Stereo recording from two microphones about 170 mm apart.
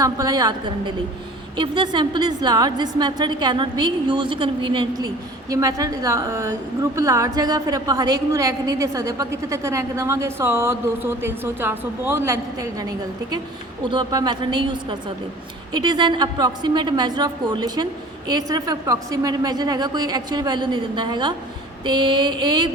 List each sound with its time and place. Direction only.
0.0 s a woman's voice: 20° right (ahead or behind)
13.9 s a woman's voice: 25° right (ahead or behind)